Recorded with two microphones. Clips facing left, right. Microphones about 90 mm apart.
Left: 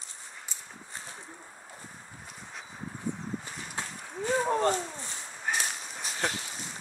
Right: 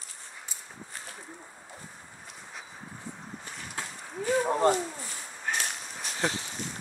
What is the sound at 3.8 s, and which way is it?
Horse, 20° left (ahead or behind).